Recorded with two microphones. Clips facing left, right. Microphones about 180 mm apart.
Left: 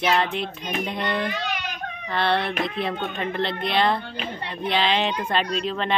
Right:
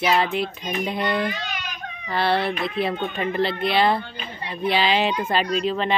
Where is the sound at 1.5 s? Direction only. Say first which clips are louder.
Left 3 dB; 60° left (ahead or behind).